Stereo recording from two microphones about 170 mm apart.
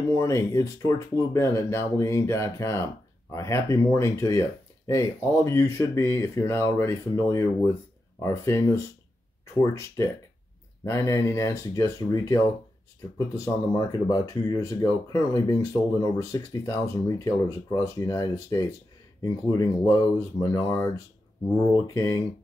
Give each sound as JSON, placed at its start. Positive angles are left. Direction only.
{"t": 0.1, "sound": "speech", "side_deg": 15}
{"t": 13.4, "sound": "speech", "side_deg": 20}